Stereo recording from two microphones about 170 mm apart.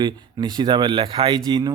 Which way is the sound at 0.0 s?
25° right (ahead or behind).